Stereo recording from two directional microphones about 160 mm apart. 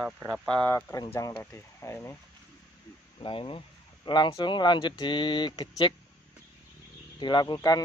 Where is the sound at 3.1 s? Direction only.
35° left (ahead or behind).